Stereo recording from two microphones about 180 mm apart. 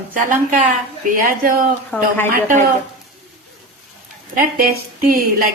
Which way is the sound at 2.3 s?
50° right (ahead or behind).